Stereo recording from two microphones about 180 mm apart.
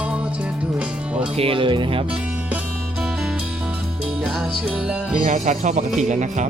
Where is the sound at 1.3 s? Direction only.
30° right (ahead or behind).